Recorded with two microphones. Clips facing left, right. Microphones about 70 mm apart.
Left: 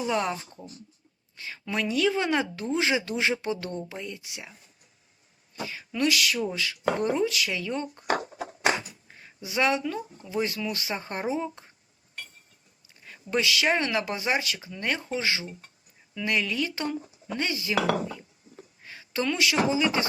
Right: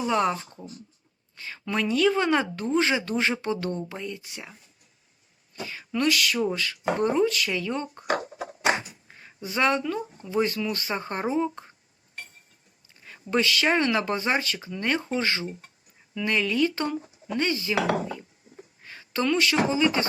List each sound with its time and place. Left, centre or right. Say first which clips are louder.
0.0 s speech: right 3 dB; centre
5.6 s speech: right 1 dB; centre
8.1 s music: right 1 dB; right
9.1 s speech: right 1 dB; centre
13.1 s speech: right 2 dB; centre
18.9 s a woman's voice: right 3 dB; centre